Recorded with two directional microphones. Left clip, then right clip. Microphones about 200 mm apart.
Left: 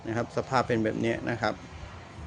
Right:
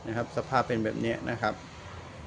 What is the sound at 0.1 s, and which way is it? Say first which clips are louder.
Speech: left 1 dB; 20° left (ahead or behind).